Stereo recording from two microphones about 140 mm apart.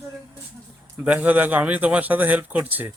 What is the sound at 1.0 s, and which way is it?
Speech, 10° right (ahead or behind).